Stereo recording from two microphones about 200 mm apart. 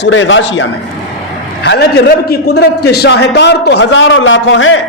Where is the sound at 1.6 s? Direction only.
55° left (ahead or behind); by 4.8 s 75° left (ahead or behind).